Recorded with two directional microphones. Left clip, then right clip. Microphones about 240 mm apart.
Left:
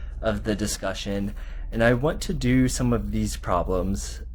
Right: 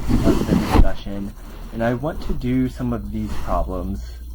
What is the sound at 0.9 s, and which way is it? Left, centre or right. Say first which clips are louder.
Speech: left 1 dB; left.